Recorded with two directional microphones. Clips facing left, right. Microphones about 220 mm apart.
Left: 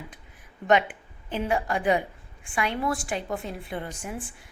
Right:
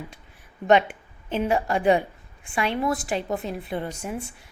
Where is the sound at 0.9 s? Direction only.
25° right (ahead or behind).